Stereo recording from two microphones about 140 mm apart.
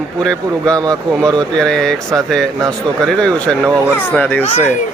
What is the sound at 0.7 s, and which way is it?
Speech, 25° right (ahead or behind).